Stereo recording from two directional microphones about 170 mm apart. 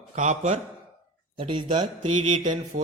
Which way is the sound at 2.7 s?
55° right (ahead or behind).